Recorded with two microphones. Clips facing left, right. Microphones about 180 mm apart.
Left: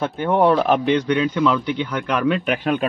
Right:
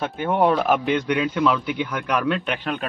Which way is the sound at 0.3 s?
Centre (ahead or behind).